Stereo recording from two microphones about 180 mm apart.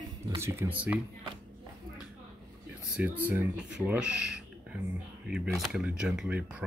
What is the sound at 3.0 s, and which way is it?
Speech, 10° right (ahead or behind).